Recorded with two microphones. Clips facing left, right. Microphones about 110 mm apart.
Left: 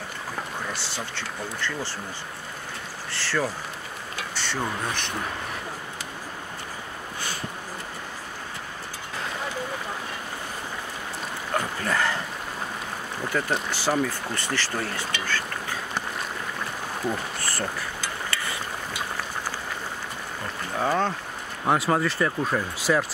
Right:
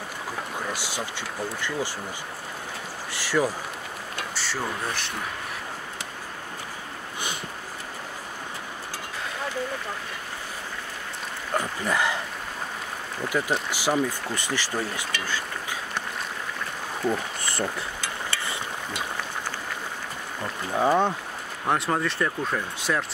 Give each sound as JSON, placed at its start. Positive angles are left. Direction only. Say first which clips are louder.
{"t": 0.7, "sound": "speech", "louder": "right 1 dB", "side_deg": -10}
{"t": 3.1, "sound": "insect", "louder": "right 3 dB", "side_deg": -15}
{"t": 4.4, "sound": "speech", "louder": "left 2 dB", "side_deg": -5}
{"t": 11.5, "sound": "a sound", "louder": "even", "side_deg": -10}
{"t": 13.3, "sound": "speech", "louder": "even", "side_deg": -10}
{"t": 17.4, "sound": "a sound", "louder": "right 1 dB", "side_deg": -20}
{"t": 20.7, "sound": "speech", "louder": "right 3 dB", "side_deg": -15}
{"t": 21.6, "sound": "speech", "louder": "left 2 dB", "side_deg": 5}